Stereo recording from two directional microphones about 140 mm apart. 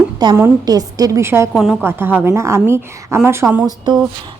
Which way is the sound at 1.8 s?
15° right (ahead or behind).